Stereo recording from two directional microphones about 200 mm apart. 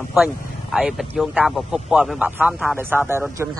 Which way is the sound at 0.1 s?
Centre (ahead or behind).